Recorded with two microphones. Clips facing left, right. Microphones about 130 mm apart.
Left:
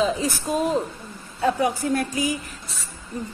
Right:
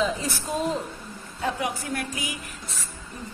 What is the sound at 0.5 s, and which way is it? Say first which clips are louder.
Speech: left 4 dB; 20° left (ahead or behind).